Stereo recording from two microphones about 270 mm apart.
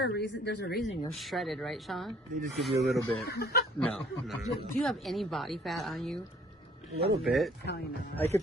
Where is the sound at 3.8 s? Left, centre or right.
Centre.